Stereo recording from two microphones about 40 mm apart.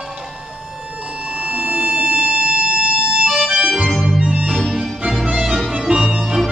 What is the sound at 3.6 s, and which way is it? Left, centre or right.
Organ, right.